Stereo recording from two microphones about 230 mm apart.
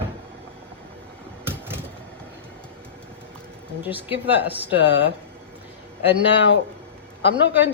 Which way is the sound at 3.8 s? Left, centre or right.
Centre.